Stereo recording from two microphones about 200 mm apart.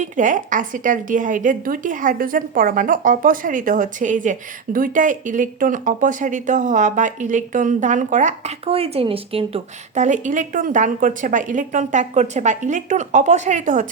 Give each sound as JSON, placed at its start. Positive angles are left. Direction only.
{"t": 0.0, "sound": "a woman's voice", "side_deg": -40}